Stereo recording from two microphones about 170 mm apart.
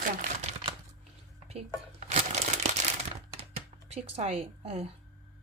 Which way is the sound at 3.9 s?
40° right (ahead or behind).